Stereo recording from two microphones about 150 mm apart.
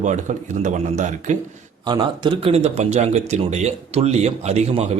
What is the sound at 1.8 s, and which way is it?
Speech, 30° right (ahead or behind).